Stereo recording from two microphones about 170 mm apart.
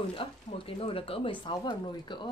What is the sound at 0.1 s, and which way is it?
Speech, 30° left (ahead or behind).